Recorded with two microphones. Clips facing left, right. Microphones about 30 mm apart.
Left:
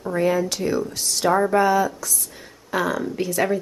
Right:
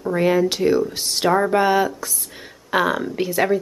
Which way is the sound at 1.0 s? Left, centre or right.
Right.